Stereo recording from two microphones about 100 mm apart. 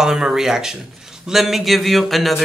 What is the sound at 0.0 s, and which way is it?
Speech, 5° right (ahead or behind).